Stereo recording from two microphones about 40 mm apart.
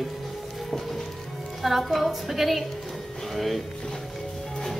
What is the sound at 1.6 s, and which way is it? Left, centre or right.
Speech, centre.